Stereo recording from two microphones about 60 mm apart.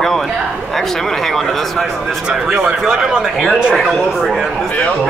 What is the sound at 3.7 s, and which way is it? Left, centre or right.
Speech, centre.